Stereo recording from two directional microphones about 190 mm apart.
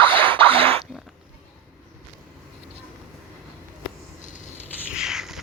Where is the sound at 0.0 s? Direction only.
10° left (ahead or behind).